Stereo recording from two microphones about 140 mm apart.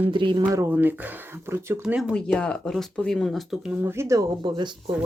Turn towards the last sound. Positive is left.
turn(degrees=-30)  # may be behind; listen again after turning